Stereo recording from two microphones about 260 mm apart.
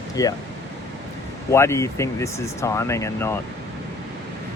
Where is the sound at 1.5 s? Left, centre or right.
Centre.